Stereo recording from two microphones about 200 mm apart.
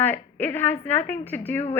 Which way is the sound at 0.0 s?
10° left (ahead or behind).